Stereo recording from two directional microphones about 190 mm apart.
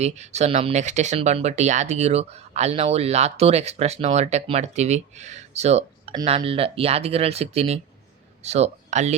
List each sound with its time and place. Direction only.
0.0 s speech: 35° right (ahead or behind)